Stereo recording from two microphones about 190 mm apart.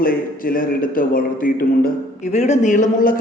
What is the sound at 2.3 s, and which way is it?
Speech, 35° left (ahead or behind).